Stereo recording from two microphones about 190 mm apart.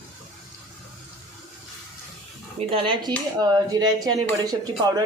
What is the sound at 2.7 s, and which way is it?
A woman's voice, 25° right (ahead or behind).